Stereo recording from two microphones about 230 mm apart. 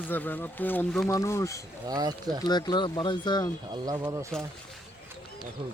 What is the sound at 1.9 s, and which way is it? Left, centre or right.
Speech, centre.